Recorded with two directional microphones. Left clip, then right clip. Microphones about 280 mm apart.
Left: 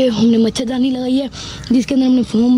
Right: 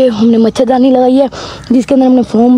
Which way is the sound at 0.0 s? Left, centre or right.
Centre.